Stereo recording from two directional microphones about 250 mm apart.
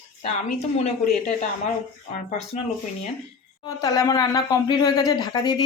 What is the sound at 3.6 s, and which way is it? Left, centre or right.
Speech, centre.